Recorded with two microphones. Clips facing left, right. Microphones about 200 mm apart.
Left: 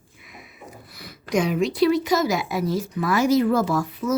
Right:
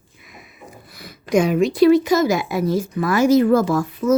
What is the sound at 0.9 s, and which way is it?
A woman's voice, 50° right (ahead or behind).